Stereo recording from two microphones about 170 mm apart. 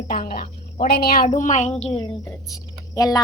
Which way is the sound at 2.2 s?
20° left (ahead or behind).